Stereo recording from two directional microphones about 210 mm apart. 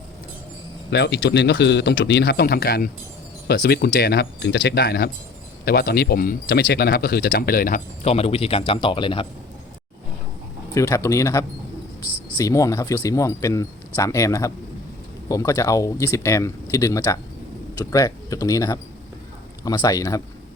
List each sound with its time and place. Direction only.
0.9 s speech: 55° left (ahead or behind); by 9.2 s 25° left (ahead or behind)
10.8 s speech: 15° left (ahead or behind)